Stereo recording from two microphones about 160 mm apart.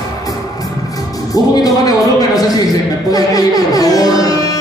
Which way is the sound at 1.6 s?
20° left (ahead or behind).